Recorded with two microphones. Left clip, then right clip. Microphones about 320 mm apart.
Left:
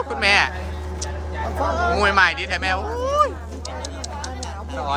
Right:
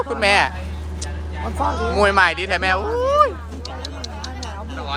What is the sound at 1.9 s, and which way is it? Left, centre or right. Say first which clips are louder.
Speech: right 3 dB; centre.